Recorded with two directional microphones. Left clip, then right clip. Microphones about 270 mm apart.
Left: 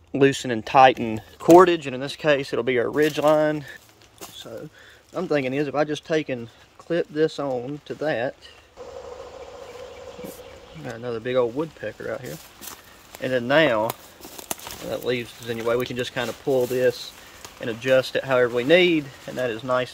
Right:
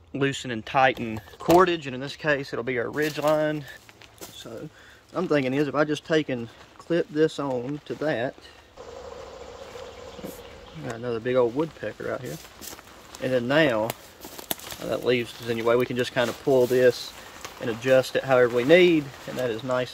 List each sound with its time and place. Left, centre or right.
0.2 s speech: left
5.1 s speech: centre
10.9 s speech: centre
14.9 s speech: centre